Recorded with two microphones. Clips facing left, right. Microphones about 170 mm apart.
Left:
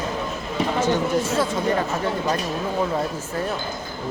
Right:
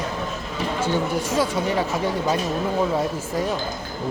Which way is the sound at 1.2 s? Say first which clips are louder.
Even; 10° right (ahead or behind).